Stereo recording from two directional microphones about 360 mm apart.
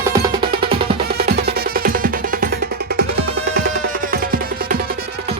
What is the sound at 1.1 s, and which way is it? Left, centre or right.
Music, right.